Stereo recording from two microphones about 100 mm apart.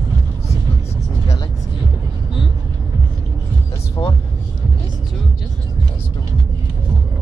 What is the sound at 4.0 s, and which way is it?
Vehicle, 45° left (ahead or behind).